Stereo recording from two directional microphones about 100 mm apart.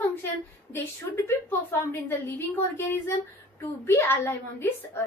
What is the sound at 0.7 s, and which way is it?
A woman's voice, 20° left (ahead or behind).